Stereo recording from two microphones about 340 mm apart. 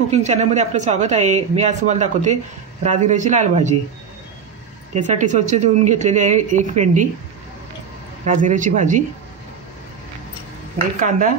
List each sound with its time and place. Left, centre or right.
0.1 s speech: centre
4.9 s speech: right
8.3 s speech: right
11.0 s speech: right